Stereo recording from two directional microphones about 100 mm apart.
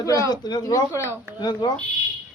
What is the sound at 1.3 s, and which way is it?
Speech, 50° left (ahead or behind).